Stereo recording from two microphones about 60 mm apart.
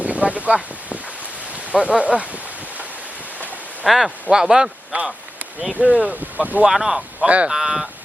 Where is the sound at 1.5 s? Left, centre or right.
Right.